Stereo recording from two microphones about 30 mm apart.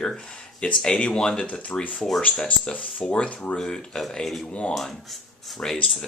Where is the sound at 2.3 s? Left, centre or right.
Left.